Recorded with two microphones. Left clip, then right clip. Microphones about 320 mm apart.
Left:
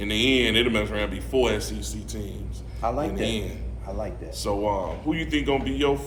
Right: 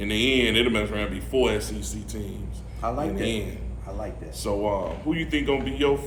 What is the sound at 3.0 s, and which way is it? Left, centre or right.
A man's voice, centre.